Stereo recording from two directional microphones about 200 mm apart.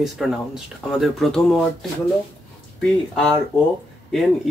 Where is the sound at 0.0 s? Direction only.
Centre (ahead or behind).